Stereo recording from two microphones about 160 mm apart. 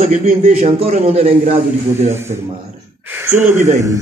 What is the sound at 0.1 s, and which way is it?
Speech, 60° right (ahead or behind).